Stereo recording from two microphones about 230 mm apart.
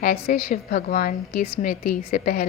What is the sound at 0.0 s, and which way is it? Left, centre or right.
A woman's voice, left.